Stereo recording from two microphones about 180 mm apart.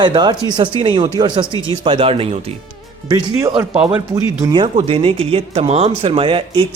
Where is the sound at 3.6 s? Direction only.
10° right (ahead or behind).